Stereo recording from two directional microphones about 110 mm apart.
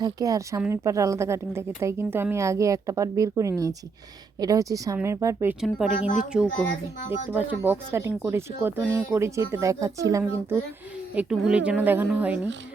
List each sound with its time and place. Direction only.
0.0 s a woman's voice: 35° right (ahead or behind)
5.5 s a woman's voice: centre (ahead or behind); by 10.6 s 30° right (ahead or behind)
11.1 s a woman's voice: 10° right (ahead or behind)